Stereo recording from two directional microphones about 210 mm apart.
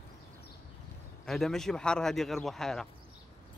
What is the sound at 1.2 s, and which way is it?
Speech, centre (ahead or behind).